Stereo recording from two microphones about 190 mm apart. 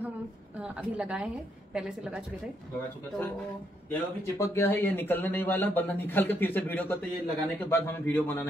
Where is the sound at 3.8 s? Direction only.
15° left (ahead or behind).